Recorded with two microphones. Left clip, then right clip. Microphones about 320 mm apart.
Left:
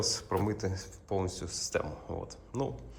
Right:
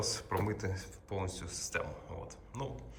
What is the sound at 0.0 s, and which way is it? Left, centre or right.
Speech, centre.